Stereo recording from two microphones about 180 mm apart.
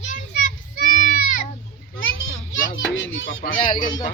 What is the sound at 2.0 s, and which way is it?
Children playing, 90° left.